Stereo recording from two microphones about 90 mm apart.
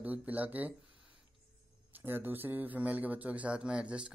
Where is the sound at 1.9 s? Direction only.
25° right (ahead or behind).